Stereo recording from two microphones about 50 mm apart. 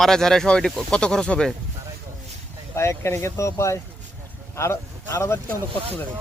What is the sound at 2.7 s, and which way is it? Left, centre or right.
Speech, left.